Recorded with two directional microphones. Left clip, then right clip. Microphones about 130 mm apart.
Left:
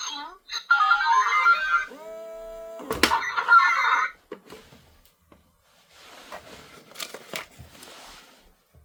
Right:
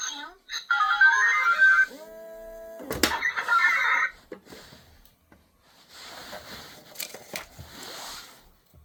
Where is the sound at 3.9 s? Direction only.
30° left (ahead or behind).